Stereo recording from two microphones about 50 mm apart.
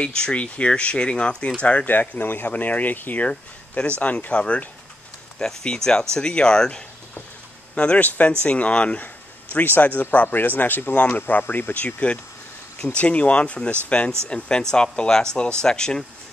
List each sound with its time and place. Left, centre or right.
0.0 s speech: centre
1.9 s a man's voice: left
3.3 s speech: left
5.4 s speech: centre
9.0 s a man's voice: left
11.7 s speech: left